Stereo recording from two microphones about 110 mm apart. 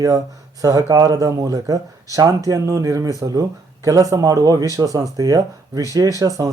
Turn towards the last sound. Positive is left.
turn(degrees=-30)  # may be behind; listen again after turning